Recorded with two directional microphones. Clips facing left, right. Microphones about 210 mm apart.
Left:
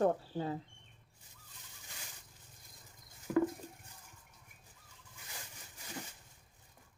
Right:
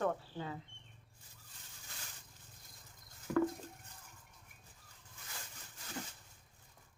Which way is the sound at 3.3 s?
10° left (ahead or behind).